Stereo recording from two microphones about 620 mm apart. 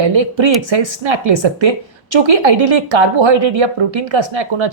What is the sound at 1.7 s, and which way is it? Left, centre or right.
Speech, right.